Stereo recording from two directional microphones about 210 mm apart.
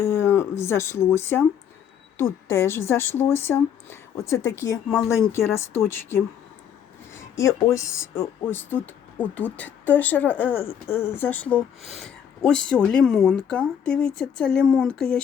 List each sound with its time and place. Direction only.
0.0 s speech: 10° left (ahead or behind)